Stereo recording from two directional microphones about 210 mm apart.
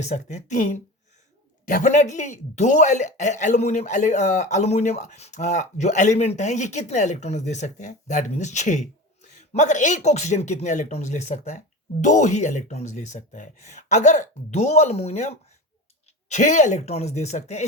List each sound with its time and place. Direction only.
0.0 s speech: 35° left (ahead or behind)